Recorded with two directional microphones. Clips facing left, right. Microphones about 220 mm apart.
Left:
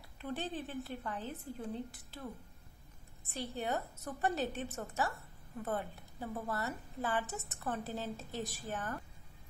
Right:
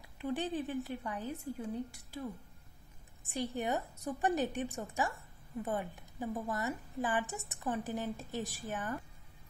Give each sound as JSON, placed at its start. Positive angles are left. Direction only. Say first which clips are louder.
{"t": 0.2, "sound": "a woman's voice", "louder": "right 4 dB", "side_deg": -15}
{"t": 3.3, "sound": "a woman's voice", "louder": "right 3 dB", "side_deg": -15}